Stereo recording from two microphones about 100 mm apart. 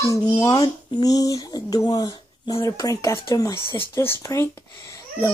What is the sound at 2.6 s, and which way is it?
Speech, 35° left (ahead or behind).